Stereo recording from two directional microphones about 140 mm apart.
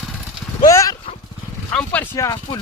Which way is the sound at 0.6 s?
25° left (ahead or behind).